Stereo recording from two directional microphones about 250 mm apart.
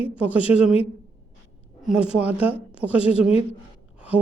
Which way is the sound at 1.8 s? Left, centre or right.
Centre.